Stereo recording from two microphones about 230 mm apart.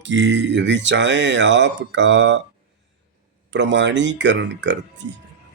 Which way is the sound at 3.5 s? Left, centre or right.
Right.